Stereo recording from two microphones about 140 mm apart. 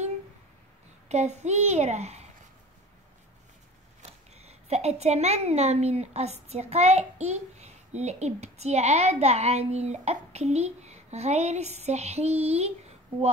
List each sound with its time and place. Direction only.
1.0 s a woman's voice: 55° right (ahead or behind)
4.0 s a woman's voice: 50° right (ahead or behind)